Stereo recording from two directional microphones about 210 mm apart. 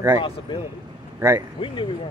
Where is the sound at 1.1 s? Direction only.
10° right (ahead or behind).